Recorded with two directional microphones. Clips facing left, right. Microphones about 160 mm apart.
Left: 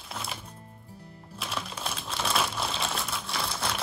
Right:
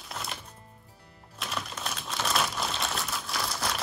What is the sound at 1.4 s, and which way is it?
Crumpling, centre (ahead or behind).